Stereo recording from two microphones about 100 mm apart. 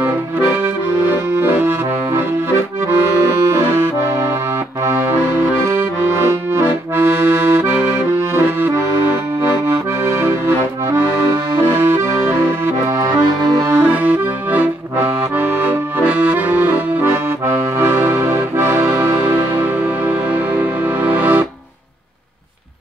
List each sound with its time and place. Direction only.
1.3 s accordion: 20° right (ahead or behind)
3.3 s accordion: 25° right (ahead or behind)
5.5 s accordion: 20° right (ahead or behind)
7.5 s accordion: 20° right (ahead or behind)
11.7 s accordion: 20° right (ahead or behind)
13.0 s accordion: 40° right (ahead or behind)
13.7 s accordion: 20° right (ahead or behind)
17.7 s music: 25° right (ahead or behind)